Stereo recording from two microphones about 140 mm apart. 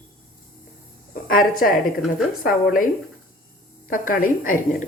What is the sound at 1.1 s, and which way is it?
A woman's voice, 90° left.